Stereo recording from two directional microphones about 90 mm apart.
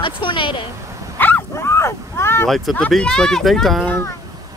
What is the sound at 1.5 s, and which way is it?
Speech, 30° left (ahead or behind).